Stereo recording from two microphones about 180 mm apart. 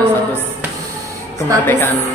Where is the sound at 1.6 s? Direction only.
10° left (ahead or behind).